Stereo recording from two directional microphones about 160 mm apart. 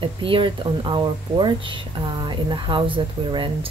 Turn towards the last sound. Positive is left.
turn(degrees=-30)  # may be behind; listen again after turning